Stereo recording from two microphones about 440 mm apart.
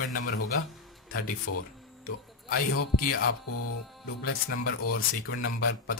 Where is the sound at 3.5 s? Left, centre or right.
Left.